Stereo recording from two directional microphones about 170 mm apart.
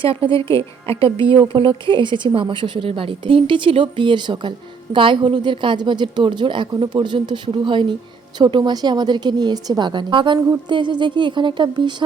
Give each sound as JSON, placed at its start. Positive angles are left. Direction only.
{"t": 0.0, "sound": "a woman's voice", "side_deg": -30}